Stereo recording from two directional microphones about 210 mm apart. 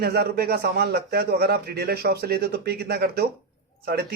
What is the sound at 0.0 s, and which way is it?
Speech, 50° right (ahead or behind).